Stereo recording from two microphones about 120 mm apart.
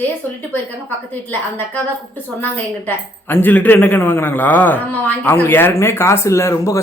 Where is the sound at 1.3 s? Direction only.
15° left (ahead or behind).